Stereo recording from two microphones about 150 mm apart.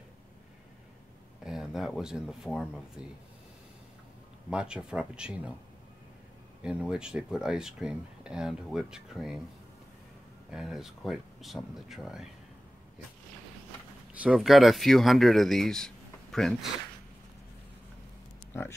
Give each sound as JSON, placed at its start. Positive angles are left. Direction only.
{"t": 1.4, "sound": "speech", "side_deg": -5}
{"t": 4.5, "sound": "speech", "side_deg": -5}
{"t": 6.6, "sound": "speech", "side_deg": -5}
{"t": 10.5, "sound": "speech", "side_deg": -5}
{"t": 14.2, "sound": "speech", "side_deg": -5}
{"t": 18.5, "sound": "speech", "side_deg": 15}